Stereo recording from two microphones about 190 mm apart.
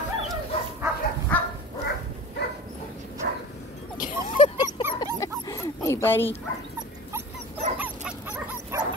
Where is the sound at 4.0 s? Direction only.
45° left (ahead or behind).